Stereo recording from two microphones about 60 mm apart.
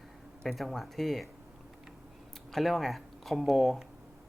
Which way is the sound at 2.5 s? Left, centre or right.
Centre.